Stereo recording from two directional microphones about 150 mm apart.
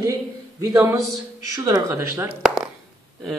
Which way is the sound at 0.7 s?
10° right (ahead or behind).